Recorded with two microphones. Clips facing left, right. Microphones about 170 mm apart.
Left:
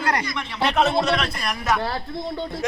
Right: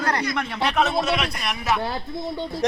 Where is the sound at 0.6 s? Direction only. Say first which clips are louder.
Left 3 dB; centre (ahead or behind).